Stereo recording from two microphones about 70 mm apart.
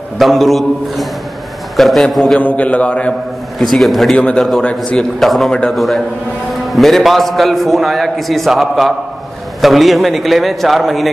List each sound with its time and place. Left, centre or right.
0.2 s a man's voice: centre
2.4 s a man's voice: left
3.7 s a man's voice: centre